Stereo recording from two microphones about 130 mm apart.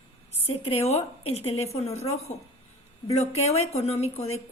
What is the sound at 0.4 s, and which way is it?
Speech, 50° left (ahead or behind).